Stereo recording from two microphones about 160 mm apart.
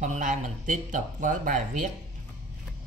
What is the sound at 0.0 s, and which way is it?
Speech, 55° right (ahead or behind).